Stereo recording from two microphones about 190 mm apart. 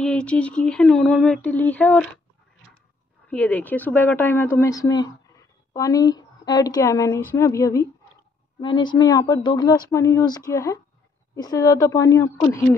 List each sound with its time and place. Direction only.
0.0 s speech: 5° left (ahead or behind)
3.3 s a woman's voice: 10° left (ahead or behind)